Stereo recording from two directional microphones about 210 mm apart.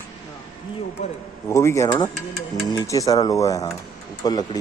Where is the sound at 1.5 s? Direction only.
15° left (ahead or behind).